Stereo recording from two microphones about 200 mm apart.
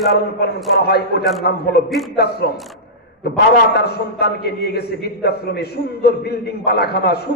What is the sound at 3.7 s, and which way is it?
A man's voice, 55° left (ahead or behind).